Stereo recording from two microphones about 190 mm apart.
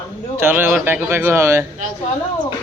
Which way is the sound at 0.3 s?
10° right (ahead or behind).